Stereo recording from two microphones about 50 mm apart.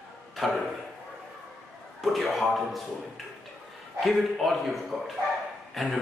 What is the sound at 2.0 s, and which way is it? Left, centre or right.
Speech, centre.